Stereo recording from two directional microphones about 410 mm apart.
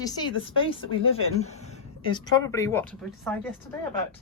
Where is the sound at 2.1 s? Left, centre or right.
Centre.